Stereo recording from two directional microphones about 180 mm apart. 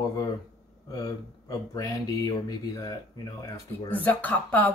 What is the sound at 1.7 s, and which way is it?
Speech, 20° left (ahead or behind).